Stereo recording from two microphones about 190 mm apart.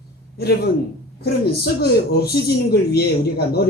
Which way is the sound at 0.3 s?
55° left (ahead or behind).